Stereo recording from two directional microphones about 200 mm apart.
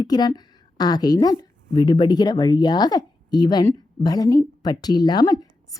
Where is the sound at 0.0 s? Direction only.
20° left (ahead or behind).